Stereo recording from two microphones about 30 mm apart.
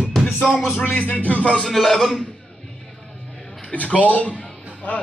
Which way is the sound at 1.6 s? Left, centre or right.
Centre.